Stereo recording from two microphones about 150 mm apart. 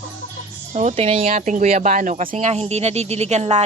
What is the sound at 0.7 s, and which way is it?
Speech, 45° right (ahead or behind).